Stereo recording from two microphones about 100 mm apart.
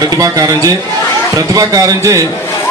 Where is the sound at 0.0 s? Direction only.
35° right (ahead or behind).